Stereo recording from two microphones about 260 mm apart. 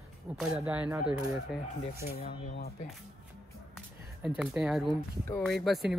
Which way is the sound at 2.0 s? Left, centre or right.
Left.